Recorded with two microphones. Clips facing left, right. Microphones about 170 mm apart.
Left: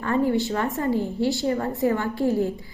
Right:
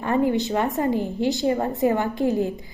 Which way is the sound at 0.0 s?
20° right (ahead or behind).